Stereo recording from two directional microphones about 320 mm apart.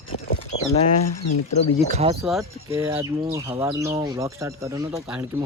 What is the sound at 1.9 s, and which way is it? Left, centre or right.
Speech, centre.